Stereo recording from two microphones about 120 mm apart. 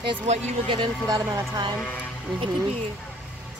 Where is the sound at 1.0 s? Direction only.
30° right (ahead or behind).